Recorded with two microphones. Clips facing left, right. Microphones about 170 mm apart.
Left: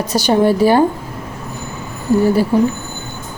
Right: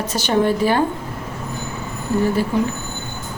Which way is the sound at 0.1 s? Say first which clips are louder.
Left 5 dB; 35° left (ahead or behind).